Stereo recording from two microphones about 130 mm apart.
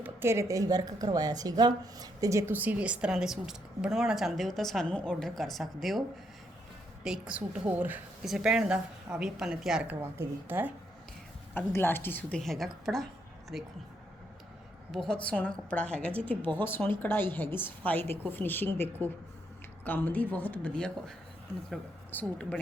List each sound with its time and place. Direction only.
0.0 s speech: 20° right (ahead or behind)
2.5 s a woman's voice: 15° right (ahead or behind)
7.0 s a woman's voice: 5° right (ahead or behind)
11.5 s a woman's voice: 15° left (ahead or behind)
12.4 s a woman's voice: centre (ahead or behind)
14.9 s a woman's voice: 5° left (ahead or behind)
22.1 s a woman's voice: 10° left (ahead or behind)